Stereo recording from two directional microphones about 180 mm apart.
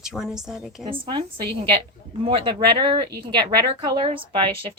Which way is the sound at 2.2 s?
30° right (ahead or behind).